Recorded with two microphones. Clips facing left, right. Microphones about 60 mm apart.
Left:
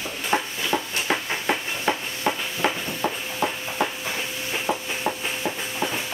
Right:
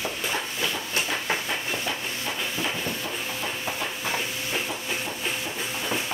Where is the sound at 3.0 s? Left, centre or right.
Left.